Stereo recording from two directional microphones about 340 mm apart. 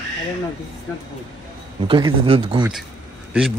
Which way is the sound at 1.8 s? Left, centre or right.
Centre.